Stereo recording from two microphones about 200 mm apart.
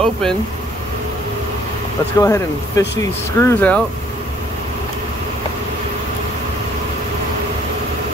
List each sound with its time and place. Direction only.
0.0 s speech: 5° left (ahead or behind)
2.1 s speech: 15° left (ahead or behind)